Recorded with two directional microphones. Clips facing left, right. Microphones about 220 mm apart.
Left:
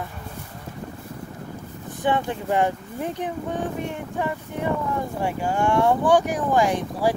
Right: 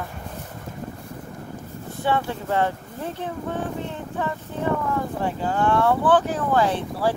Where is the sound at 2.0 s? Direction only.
15° left (ahead or behind).